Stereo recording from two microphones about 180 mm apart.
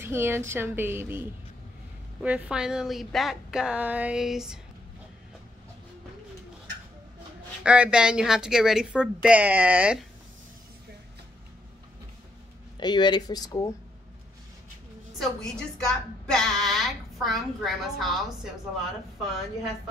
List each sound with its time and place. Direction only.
0.0 s a woman's voice: 15° right (ahead or behind)
7.6 s a woman's voice: 5° right (ahead or behind)
12.7 s speech: 25° left (ahead or behind)
15.1 s a woman's voice: centre (ahead or behind)